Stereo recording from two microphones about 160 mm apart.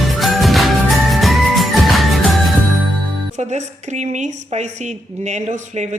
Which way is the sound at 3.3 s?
45° right (ahead or behind).